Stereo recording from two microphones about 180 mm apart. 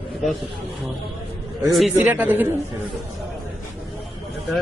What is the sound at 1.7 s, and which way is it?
Speech, centre (ahead or behind).